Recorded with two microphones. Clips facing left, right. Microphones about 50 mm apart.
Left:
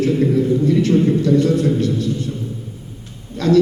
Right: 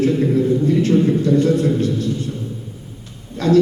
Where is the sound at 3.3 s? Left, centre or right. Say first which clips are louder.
Even; right.